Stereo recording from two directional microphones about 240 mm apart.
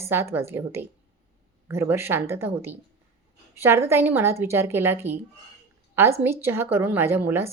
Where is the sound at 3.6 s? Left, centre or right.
Centre.